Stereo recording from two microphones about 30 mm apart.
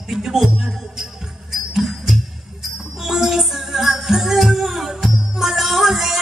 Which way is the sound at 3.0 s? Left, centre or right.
Centre.